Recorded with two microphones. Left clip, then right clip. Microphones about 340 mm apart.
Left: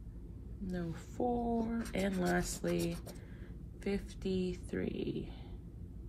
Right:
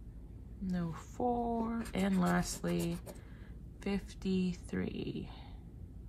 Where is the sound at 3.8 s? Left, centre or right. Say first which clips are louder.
Left 1 dB; centre.